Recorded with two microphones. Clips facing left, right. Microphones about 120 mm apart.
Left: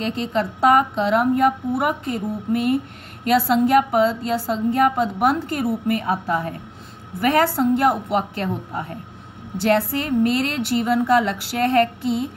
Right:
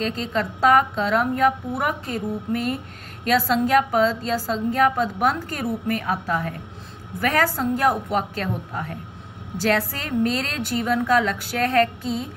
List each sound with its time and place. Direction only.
0.0 s a woman's voice: 25° left (ahead or behind)